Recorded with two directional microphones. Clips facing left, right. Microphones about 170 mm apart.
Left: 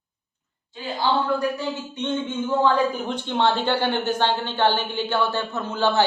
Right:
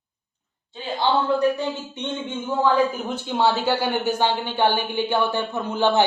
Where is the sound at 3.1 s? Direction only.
5° right (ahead or behind).